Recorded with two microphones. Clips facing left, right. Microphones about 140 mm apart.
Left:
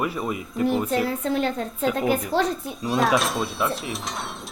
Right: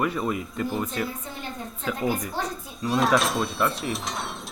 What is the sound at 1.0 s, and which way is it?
Speech, 75° left (ahead or behind).